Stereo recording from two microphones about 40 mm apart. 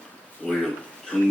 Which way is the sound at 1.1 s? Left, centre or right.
Left.